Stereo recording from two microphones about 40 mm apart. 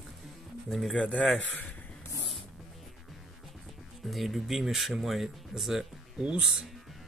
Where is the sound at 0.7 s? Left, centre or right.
Centre.